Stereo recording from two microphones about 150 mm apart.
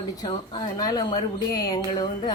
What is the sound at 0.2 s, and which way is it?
Speech, 25° left (ahead or behind).